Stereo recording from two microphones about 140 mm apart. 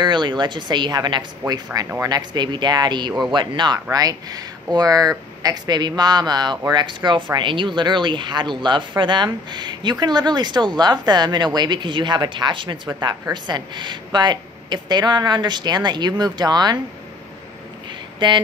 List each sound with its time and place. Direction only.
0.0 s speech: 35° right (ahead or behind)
18.2 s speech: 35° right (ahead or behind)